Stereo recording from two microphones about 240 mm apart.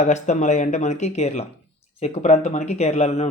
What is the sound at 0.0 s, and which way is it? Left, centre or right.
Speech, left.